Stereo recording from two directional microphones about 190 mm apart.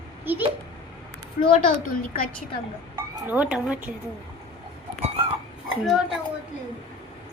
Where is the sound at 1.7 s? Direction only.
50° left (ahead or behind).